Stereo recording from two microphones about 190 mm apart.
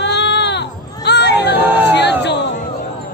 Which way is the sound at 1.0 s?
60° left (ahead or behind).